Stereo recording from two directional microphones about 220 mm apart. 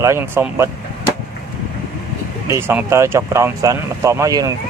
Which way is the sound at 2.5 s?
10° right (ahead or behind).